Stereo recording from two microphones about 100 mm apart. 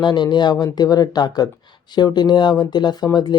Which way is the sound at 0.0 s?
50° left (ahead or behind).